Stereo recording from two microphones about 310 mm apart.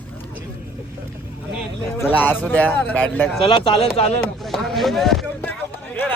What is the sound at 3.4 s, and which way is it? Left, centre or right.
Speech, centre.